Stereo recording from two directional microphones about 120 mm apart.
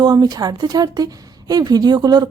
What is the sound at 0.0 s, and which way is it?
Speech, 35° right (ahead or behind).